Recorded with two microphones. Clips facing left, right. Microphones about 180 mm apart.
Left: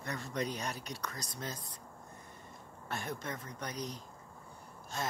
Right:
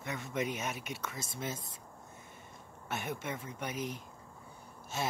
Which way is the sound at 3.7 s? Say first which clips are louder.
Right 3 dB; 25° right (ahead or behind).